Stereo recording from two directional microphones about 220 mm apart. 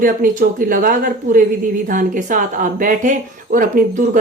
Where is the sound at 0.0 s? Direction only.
40° right (ahead or behind).